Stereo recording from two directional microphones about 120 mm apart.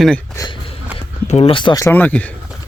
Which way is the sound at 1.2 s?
70° left (ahead or behind).